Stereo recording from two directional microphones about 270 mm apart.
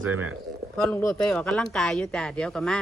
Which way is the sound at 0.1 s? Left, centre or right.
Right.